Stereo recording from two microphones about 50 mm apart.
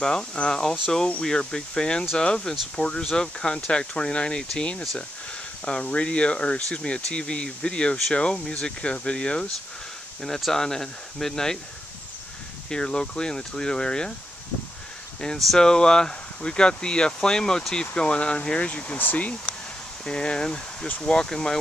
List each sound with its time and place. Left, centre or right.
0.0 s speech: centre
12.6 s speech: centre
15.3 s speech: centre
15.6 s speech: centre; by 19.3 s left
20.1 s speech: centre